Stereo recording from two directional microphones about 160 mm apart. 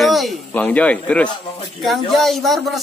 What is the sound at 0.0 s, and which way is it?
A man's voice, centre (ahead or behind).